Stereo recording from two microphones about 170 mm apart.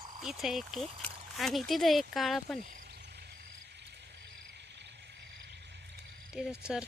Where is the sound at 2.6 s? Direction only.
60° right (ahead or behind); by 6.0 s 85° right.